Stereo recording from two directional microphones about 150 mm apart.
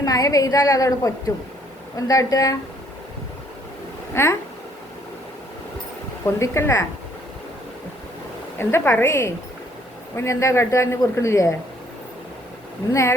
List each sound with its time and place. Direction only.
0.0 s a man's voice: 25° left (ahead or behind)
4.1 s a woman's voice: 15° left (ahead or behind)
6.4 s a woman's voice: 20° left (ahead or behind)
8.5 s a woman's voice: 15° left (ahead or behind)
12.9 s a man's voice: 20° left (ahead or behind)